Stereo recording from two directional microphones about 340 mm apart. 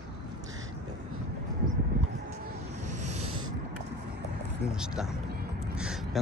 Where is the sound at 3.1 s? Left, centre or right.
Right.